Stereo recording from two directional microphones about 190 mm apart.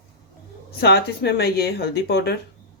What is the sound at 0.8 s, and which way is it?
Speech, 60° left (ahead or behind).